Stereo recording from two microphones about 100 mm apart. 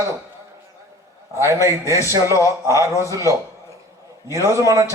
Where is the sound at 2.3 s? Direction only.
30° left (ahead or behind).